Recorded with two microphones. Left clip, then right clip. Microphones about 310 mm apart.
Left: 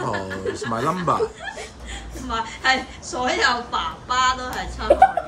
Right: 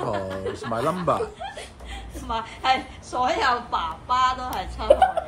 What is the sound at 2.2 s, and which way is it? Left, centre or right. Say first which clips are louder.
A woman's voice: left 2 dB; centre.